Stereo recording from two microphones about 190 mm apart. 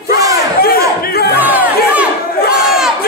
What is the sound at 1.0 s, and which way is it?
Crowd, 55° left (ahead or behind).